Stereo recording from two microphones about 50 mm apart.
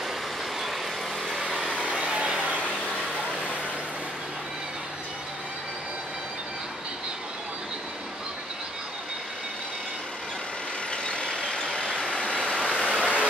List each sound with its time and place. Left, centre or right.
1.9 s vehicle: right
10.9 s vehicle: centre
13.0 s vehicle: right